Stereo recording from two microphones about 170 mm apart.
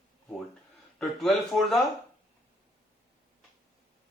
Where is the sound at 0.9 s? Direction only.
Centre (ahead or behind).